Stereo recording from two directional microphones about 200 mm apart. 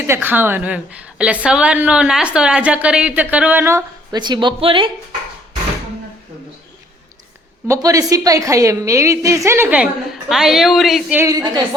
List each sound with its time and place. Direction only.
0.1 s a woman's voice: 10° right (ahead or behind); by 4.9 s 25° right (ahead or behind)
7.7 s a woman's voice: 15° right (ahead or behind); by 11.2 s centre (ahead or behind)
11.2 s a woman's voice: 20° right (ahead or behind)